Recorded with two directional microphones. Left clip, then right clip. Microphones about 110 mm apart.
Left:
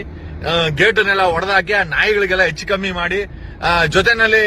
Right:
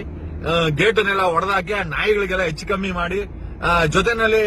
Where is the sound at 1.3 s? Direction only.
Centre (ahead or behind).